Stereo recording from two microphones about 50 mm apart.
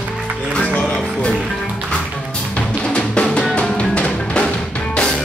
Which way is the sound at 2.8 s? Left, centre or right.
Centre.